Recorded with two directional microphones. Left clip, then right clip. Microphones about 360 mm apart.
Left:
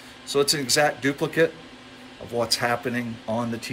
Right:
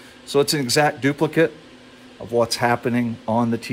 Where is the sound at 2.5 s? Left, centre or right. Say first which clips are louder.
Right 4 dB; centre.